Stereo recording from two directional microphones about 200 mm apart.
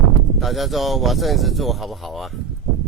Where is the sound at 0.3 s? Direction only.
Centre (ahead or behind).